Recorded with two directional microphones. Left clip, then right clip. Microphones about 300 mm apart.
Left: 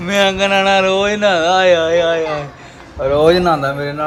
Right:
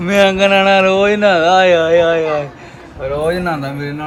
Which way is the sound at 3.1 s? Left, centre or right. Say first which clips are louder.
Left 6 dB; left.